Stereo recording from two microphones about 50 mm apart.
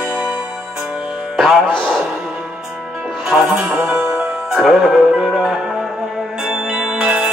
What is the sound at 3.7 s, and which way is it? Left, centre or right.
Music, right.